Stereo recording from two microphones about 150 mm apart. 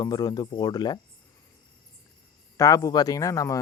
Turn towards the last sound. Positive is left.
turn(degrees=20)  # may be behind; listen again after turning